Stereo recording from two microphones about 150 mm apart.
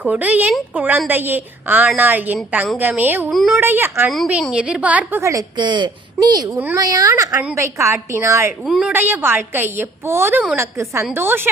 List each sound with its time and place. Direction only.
0.0 s a woman's voice: 10° right (ahead or behind)
3.2 s a woman's voice: centre (ahead or behind)
3.6 s a woman's voice: 15° right (ahead or behind)
5.2 s a woman's voice: 20° right (ahead or behind)
8.6 s a woman's voice: 5° right (ahead or behind)